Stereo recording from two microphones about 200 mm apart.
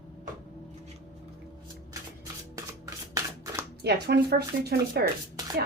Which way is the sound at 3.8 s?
55° right (ahead or behind).